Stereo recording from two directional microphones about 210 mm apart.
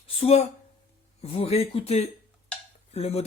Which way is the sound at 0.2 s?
30° left (ahead or behind).